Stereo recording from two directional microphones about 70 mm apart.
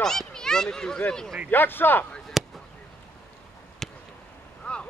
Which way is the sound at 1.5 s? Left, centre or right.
Left.